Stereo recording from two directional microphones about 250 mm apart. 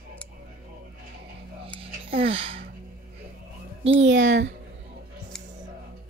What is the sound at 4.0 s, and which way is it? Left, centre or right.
Speech, right.